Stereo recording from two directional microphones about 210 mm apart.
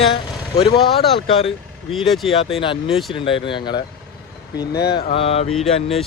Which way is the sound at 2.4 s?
25° left (ahead or behind).